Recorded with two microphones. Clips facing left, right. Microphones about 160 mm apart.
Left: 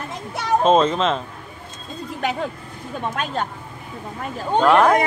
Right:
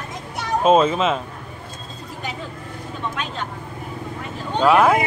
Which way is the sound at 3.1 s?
45° left (ahead or behind).